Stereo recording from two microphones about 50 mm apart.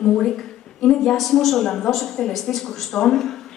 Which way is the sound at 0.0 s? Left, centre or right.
Centre.